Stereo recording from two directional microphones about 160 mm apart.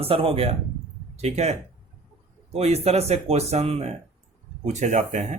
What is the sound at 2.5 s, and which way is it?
Speech, 40° right (ahead or behind).